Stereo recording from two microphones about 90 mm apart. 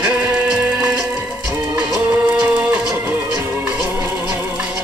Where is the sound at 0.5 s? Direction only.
15° right (ahead or behind).